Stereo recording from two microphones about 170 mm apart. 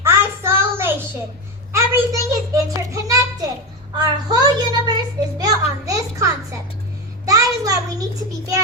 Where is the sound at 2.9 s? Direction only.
20° right (ahead or behind).